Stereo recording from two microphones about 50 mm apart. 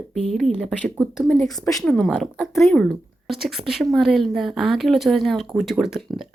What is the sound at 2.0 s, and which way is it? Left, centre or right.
Speech, centre.